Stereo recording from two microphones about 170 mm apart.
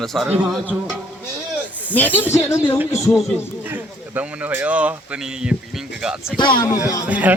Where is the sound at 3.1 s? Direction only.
5° right (ahead or behind).